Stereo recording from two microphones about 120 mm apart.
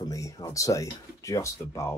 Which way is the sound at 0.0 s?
30° left (ahead or behind).